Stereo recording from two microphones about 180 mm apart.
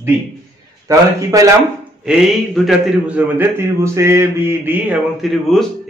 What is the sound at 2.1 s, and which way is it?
A man's voice, centre (ahead or behind).